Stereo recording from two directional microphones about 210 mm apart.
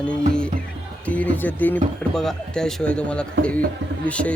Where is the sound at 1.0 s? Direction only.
5° left (ahead or behind).